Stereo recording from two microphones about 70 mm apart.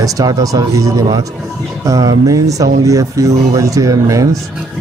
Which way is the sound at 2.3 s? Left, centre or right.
Right.